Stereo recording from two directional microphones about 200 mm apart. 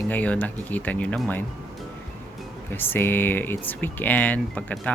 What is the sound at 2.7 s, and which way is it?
Speech, 10° left (ahead or behind).